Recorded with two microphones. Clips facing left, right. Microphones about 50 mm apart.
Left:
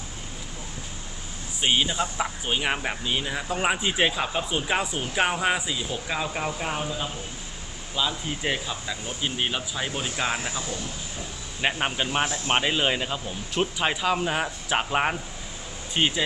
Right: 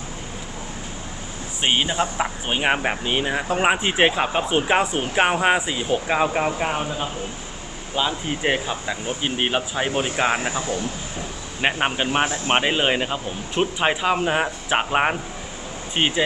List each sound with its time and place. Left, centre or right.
1.6 s speech: right